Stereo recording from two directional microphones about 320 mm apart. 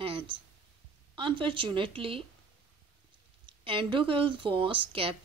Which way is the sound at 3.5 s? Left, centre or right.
Centre.